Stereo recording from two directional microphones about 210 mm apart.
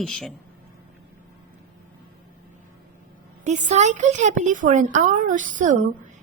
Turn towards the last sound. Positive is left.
turn(degrees=-35)  # may be behind; listen again after turning